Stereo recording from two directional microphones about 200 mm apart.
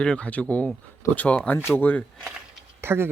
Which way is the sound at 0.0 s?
5° left (ahead or behind).